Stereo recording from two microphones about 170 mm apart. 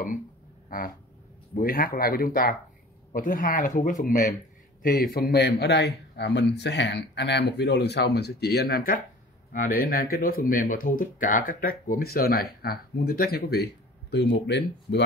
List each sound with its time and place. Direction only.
0.7 s a sound: 55° left (ahead or behind)
1.5 s a man's voice: 60° left (ahead or behind)
9.5 s speech: 55° left (ahead or behind); by 15.0 s 90° left